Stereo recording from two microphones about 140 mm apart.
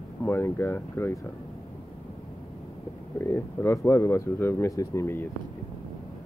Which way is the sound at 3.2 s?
20° left (ahead or behind).